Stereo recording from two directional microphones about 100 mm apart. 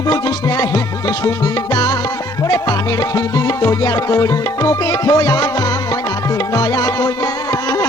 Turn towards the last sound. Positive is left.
turn(degrees=40)  # may be behind; listen again after turning